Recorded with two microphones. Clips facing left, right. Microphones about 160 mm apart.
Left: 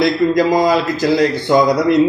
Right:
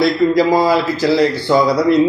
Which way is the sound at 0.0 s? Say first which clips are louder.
Right 1 dB; 15° left (ahead or behind).